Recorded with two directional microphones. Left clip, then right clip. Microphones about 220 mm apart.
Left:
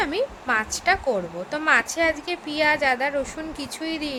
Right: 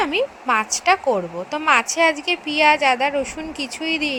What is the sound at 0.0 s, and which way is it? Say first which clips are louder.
A woman's voice: right 4 dB; 10° right (ahead or behind).